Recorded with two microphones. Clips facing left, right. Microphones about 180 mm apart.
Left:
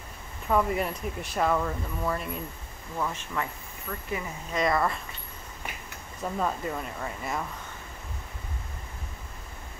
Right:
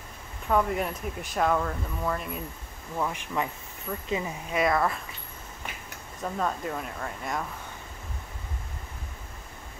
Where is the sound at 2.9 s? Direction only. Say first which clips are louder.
Right 2 dB; 15° right (ahead or behind).